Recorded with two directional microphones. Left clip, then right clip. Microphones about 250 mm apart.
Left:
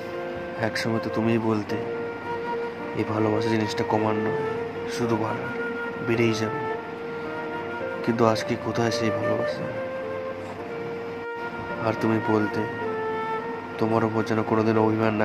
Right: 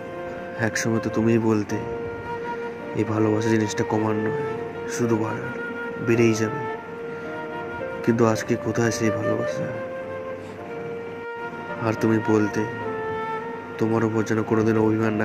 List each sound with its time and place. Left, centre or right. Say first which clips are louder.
0.6 s speech: right 2 dB; centre
3.0 s speech: right 2 dB; centre
6.0 s speech: right 4 dB; centre
8.0 s speech: right 1 dB; centre
11.8 s speech: right 2 dB; centre
13.7 s speech: right 1 dB; centre